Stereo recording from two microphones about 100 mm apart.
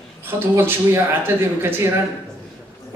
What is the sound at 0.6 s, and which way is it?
A woman's voice, 25° right (ahead or behind).